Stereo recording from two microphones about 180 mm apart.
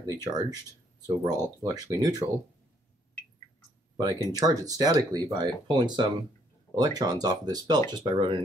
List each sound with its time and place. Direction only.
0.0 s speech: 20° right (ahead or behind)
3.9 s speech: 25° right (ahead or behind)